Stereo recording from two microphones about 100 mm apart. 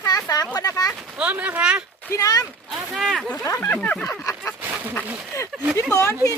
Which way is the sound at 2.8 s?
Centre (ahead or behind).